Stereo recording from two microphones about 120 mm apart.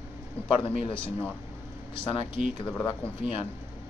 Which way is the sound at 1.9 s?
45° left (ahead or behind).